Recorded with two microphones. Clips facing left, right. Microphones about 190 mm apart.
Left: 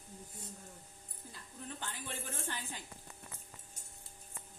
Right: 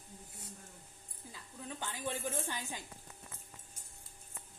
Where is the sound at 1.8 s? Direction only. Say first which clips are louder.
Right 9 dB; 15° right (ahead or behind).